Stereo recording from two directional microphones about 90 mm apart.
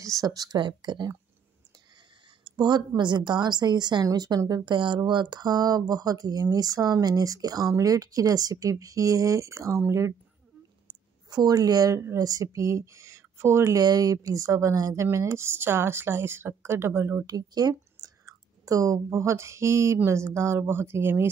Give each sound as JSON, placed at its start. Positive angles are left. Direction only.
{"t": 0.2, "sound": "speech", "side_deg": -45}
{"t": 2.4, "sound": "a sound", "side_deg": -55}
{"t": 3.0, "sound": "speech", "side_deg": -55}
{"t": 4.6, "sound": "speech", "side_deg": -60}
{"t": 11.2, "sound": "speech", "side_deg": -45}
{"t": 17.3, "sound": "speech", "side_deg": -45}